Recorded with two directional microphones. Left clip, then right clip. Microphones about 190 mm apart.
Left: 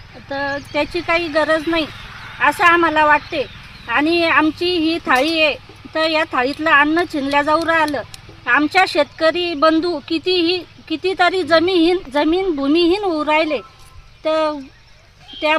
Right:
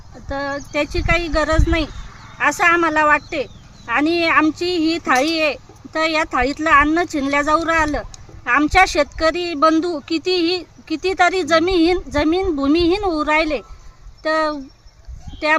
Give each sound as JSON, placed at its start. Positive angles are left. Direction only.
{"t": 0.3, "sound": "speech", "side_deg": -30}